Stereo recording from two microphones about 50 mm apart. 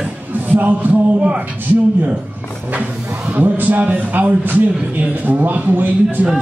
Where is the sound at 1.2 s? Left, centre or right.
Right.